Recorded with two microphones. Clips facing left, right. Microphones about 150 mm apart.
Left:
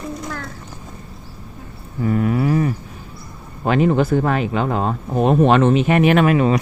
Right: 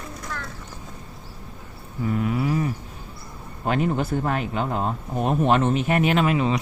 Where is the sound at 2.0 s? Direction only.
55° left (ahead or behind).